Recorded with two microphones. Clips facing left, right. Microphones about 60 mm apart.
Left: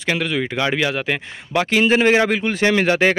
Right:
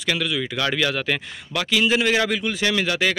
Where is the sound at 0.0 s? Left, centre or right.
Left.